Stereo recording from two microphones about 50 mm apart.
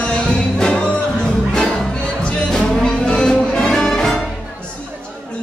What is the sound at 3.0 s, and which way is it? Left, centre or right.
Music, centre.